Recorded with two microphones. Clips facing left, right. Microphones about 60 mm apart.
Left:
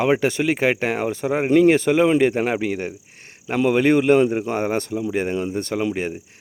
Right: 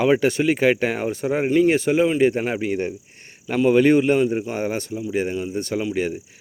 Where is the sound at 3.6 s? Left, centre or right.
Left.